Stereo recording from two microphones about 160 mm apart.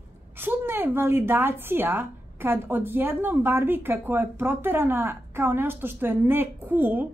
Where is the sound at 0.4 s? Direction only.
10° right (ahead or behind).